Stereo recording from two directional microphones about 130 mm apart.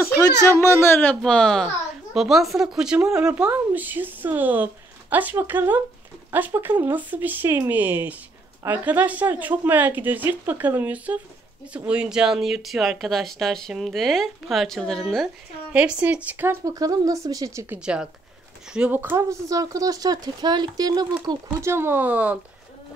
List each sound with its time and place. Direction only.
0.5 s speech: 20° left (ahead or behind)
1.2 s speech: 5° left (ahead or behind)
15.7 s speech: 10° right (ahead or behind)
17.7 s speech: 5° right (ahead or behind)
18.9 s speech: 20° right (ahead or behind)
21.5 s speech: 20° right (ahead or behind)